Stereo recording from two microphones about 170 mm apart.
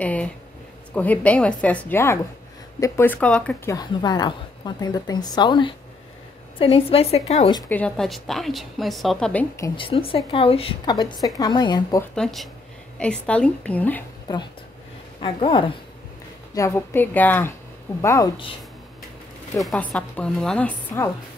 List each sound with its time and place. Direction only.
0.0 s a woman's voice: 10° left (ahead or behind)
3.7 s a woman's voice: 25° left (ahead or behind)
7.7 s a woman's voice: 5° left (ahead or behind)
9.8 s a woman's voice: 30° left (ahead or behind)
12.0 s a woman's voice: centre (ahead or behind)
14.2 s speech: 25° left (ahead or behind)
16.5 s a woman's voice: 15° left (ahead or behind)
19.6 s a woman's voice: 5° left (ahead or behind)